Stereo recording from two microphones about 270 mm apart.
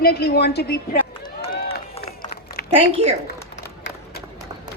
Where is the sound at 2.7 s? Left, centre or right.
Centre.